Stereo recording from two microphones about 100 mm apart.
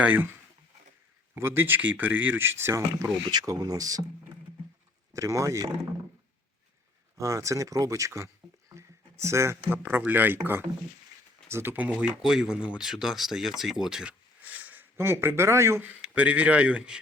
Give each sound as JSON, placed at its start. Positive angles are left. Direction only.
{"t": 0.0, "sound": "speech", "side_deg": -20}
{"t": 1.4, "sound": "speech", "side_deg": -25}
{"t": 5.1, "sound": "speech", "side_deg": -30}
{"t": 7.2, "sound": "speech", "side_deg": -30}
{"t": 8.7, "sound": "a sound", "side_deg": -30}
{"t": 9.9, "sound": "speech", "side_deg": -20}
{"t": 16.0, "sound": "speech", "side_deg": -15}